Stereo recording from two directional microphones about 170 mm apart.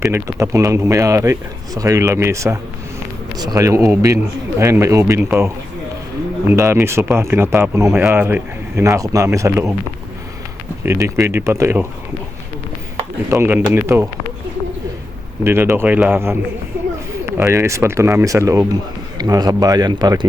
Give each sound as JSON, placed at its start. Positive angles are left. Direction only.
{"t": 0.1, "sound": "speech", "side_deg": -15}
{"t": 6.5, "sound": "speech", "side_deg": -15}
{"t": 10.8, "sound": "speech", "side_deg": -15}
{"t": 13.3, "sound": "speech", "side_deg": -15}
{"t": 15.4, "sound": "speech", "side_deg": -15}